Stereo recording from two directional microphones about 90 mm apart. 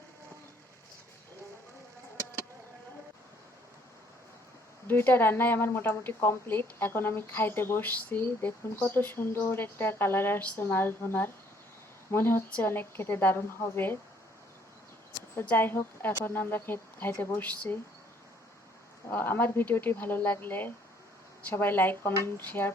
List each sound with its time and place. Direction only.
4.9 s a woman's voice: 25° left (ahead or behind)
15.4 s a woman's voice: 25° left (ahead or behind)
19.1 s a woman's voice: 25° left (ahead or behind)